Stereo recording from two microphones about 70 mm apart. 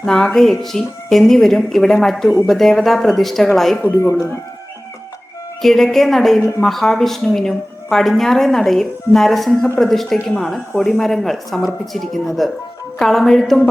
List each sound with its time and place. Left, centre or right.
0.0 s a woman's voice: centre
3.8 s speech: left
5.6 s a woman's voice: centre